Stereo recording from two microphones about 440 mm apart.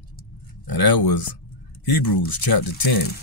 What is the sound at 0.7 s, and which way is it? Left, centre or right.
Speech, left.